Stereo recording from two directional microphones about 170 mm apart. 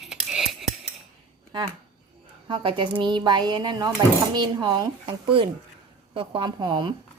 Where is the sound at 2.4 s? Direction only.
30° right (ahead or behind).